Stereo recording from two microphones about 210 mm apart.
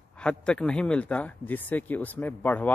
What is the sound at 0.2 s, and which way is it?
Speech, 5° left (ahead or behind).